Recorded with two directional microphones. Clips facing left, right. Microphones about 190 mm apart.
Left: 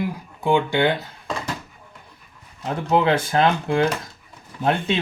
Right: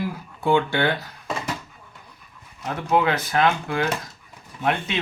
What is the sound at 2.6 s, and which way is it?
Speech, 30° left (ahead or behind).